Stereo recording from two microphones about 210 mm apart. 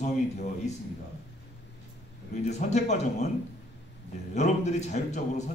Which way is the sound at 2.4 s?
35° left (ahead or behind).